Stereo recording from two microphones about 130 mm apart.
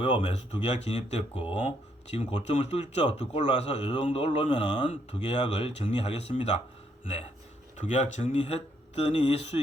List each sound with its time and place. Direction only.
0.0 s speech: 50° left (ahead or behind)
1.3 s speech: 40° left (ahead or behind); by 4.0 s 60° left (ahead or behind)
4.0 s speech: 45° left (ahead or behind)